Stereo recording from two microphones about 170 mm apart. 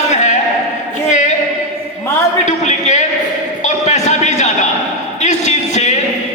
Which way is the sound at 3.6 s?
45° left (ahead or behind).